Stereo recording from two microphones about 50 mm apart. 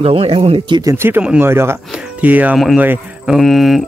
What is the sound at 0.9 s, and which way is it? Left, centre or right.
Speech, right.